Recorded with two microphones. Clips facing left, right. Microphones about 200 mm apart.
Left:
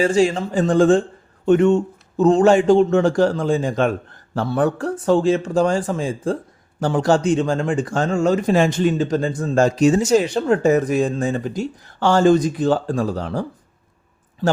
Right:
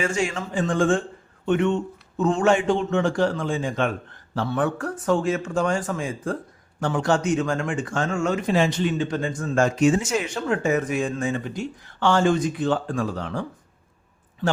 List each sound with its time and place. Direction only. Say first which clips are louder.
0.0 s speech: left 8 dB; 35° left (ahead or behind)